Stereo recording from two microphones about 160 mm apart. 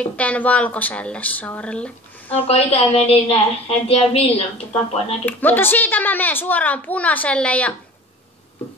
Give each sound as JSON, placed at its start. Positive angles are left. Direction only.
{"t": 0.0, "sound": "a child's voice", "side_deg": 10}
{"t": 2.3, "sound": "a woman's voice", "side_deg": 40}
{"t": 5.2, "sound": "a child's voice", "side_deg": 10}